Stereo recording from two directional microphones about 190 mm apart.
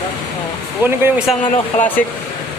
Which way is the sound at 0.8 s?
10° right (ahead or behind).